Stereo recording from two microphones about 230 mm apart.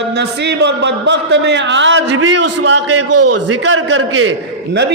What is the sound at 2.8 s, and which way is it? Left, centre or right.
A man's voice, right.